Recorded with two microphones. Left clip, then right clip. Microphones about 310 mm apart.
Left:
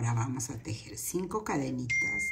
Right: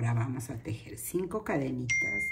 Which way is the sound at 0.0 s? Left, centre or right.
Centre.